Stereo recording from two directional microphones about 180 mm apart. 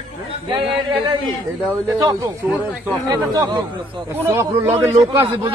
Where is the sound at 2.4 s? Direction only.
10° right (ahead or behind).